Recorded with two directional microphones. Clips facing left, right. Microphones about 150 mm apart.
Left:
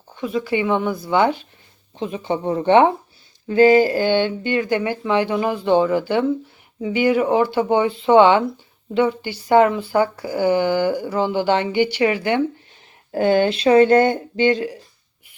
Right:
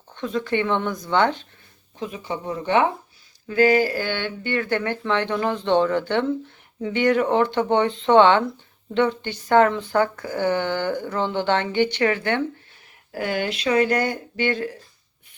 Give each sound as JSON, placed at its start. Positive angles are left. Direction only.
{"t": 0.1, "sound": "speech", "side_deg": 5}
{"t": 2.0, "sound": "speech", "side_deg": 30}
{"t": 13.1, "sound": "speech", "side_deg": 25}